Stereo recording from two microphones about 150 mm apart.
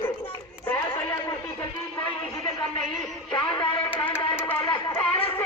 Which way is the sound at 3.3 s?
30° left (ahead or behind).